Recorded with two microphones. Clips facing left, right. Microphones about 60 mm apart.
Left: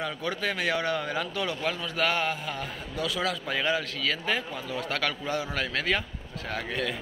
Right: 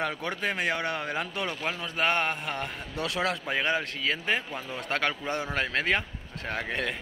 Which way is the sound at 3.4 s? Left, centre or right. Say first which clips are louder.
Even; right.